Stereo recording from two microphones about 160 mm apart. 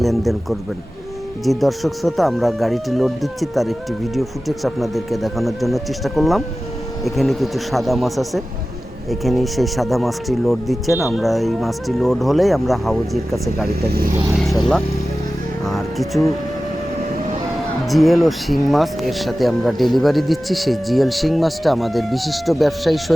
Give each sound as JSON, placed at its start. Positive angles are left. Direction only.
{"t": 0.0, "sound": "a man's voice", "side_deg": 0}
{"t": 1.5, "sound": "speech", "side_deg": 0}
{"t": 13.7, "sound": "speech", "side_deg": -75}
{"t": 15.6, "sound": "music", "side_deg": 0}
{"t": 17.8, "sound": "speech", "side_deg": 0}